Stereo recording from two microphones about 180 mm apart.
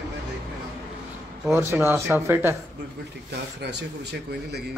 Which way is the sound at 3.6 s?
70° right (ahead or behind).